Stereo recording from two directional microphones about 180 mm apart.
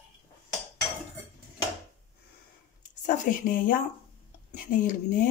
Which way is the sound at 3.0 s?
50° left (ahead or behind).